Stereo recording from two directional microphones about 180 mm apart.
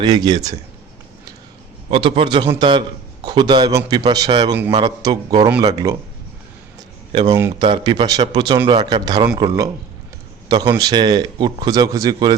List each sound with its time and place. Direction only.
0.0 s speech: 25° right (ahead or behind)
1.9 s a man's voice: 30° right (ahead or behind)
7.1 s speech: 25° right (ahead or behind)
10.5 s speech: 25° right (ahead or behind)